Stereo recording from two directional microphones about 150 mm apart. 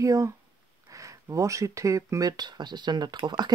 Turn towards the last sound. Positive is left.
turn(degrees=-30)  # may be behind; listen again after turning